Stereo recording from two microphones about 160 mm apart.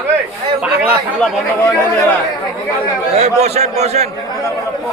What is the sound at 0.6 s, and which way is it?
Speech, 5° right (ahead or behind).